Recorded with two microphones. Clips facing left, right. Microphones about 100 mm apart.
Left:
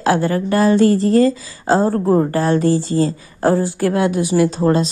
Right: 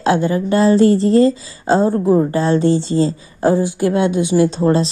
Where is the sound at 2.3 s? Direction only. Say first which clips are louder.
Right 1 dB; 25° right (ahead or behind).